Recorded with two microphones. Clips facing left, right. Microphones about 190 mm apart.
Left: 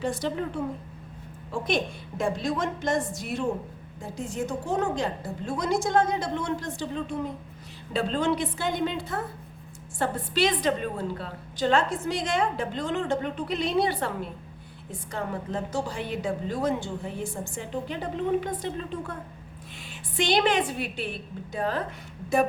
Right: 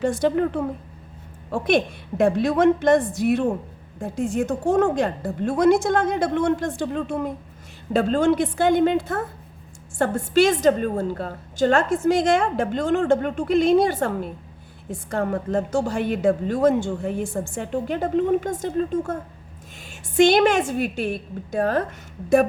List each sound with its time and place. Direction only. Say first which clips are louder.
0.0 s a woman's voice: right 8 dB; 50° right (ahead or behind)